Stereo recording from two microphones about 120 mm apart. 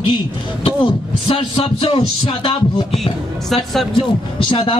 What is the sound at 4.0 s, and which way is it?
Speech, 45° left (ahead or behind).